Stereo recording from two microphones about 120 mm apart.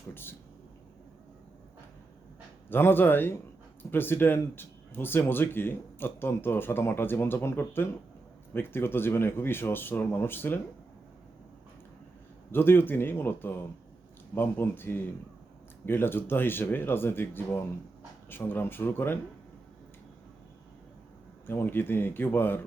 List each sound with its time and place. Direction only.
0.1 s speech: 20° left (ahead or behind)
2.6 s speech: 15° left (ahead or behind)
12.5 s speech: 20° left (ahead or behind)
21.4 s speech: 20° left (ahead or behind)